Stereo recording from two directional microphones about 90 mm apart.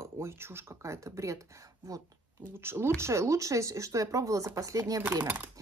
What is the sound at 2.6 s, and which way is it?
Speech, 30° right (ahead or behind).